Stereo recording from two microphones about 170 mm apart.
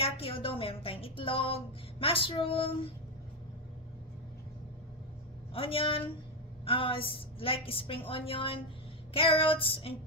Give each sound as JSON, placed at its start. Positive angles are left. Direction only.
{"t": 0.0, "sound": "speech", "side_deg": 35}
{"t": 5.5, "sound": "speech", "side_deg": 35}